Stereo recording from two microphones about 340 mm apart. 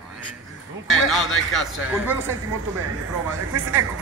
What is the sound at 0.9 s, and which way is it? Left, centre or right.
Speech, centre.